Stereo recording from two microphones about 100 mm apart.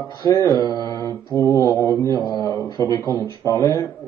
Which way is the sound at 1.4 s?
30° left (ahead or behind).